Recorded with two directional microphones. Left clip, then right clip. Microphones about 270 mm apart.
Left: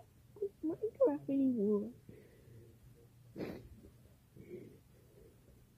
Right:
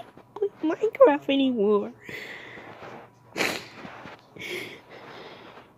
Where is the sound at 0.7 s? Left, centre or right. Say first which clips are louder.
Right 15 dB; centre.